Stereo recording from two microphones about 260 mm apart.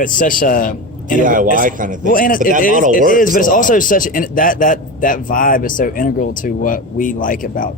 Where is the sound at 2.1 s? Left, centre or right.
Left.